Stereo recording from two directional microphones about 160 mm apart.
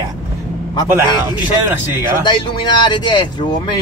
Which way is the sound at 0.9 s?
15° right (ahead or behind).